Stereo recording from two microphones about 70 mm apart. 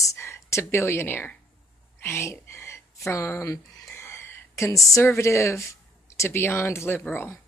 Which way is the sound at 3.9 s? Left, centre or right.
Left.